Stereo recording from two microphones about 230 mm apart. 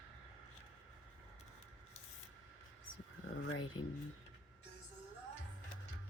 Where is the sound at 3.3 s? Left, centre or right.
Left.